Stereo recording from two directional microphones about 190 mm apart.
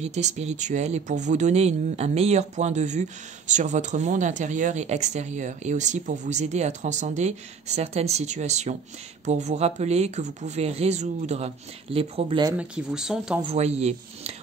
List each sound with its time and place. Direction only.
0.0 s speech: 35° right (ahead or behind)
12.5 s speech: 5° right (ahead or behind)
13.4 s speech: 30° right (ahead or behind)